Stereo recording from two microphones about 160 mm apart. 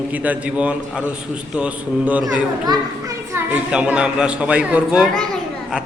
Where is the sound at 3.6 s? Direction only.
5° right (ahead or behind).